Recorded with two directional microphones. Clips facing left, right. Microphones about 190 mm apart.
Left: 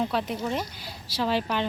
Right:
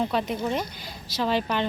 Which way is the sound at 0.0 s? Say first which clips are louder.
Right 2 dB; centre (ahead or behind).